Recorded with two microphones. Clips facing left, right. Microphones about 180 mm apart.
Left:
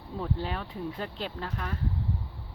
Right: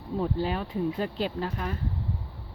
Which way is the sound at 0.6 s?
10° right (ahead or behind).